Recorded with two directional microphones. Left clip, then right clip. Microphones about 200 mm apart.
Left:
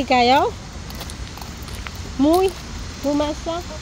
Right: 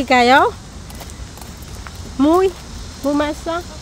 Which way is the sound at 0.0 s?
20° right (ahead or behind).